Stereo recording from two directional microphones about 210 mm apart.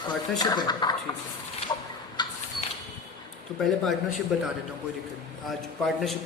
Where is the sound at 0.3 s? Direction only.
20° left (ahead or behind).